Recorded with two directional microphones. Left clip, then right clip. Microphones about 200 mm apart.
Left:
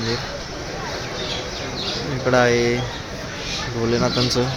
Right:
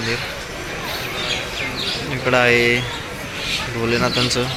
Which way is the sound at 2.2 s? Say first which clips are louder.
Right 2 dB; 15° left (ahead or behind).